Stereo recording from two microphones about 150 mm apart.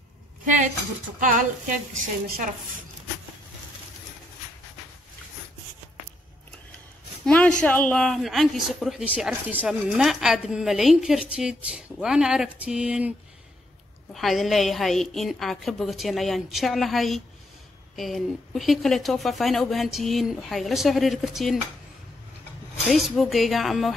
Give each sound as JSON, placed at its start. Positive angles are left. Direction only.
{"t": 2.0, "sound": "a woman's voice", "side_deg": -70}
{"t": 7.2, "sound": "a sound", "side_deg": 5}
{"t": 7.6, "sound": "a woman's voice", "side_deg": 10}
{"t": 14.1, "sound": "a woman's voice", "side_deg": 0}
{"t": 22.8, "sound": "a woman's voice", "side_deg": 0}